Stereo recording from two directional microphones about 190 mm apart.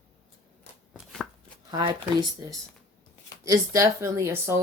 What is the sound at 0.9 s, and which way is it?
Chopping, centre (ahead or behind).